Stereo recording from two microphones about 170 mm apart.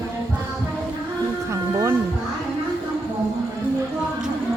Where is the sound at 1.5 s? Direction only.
15° right (ahead or behind).